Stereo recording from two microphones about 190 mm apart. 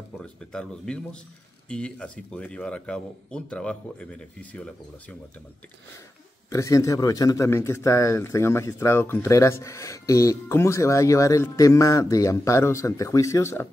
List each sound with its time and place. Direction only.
0.2 s speech: 5° left (ahead or behind)
6.5 s a man's voice: 15° left (ahead or behind)